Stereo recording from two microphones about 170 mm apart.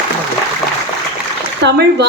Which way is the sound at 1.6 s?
85° right.